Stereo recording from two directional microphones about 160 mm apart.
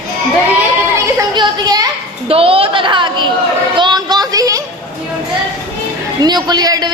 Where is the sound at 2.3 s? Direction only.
35° right (ahead or behind).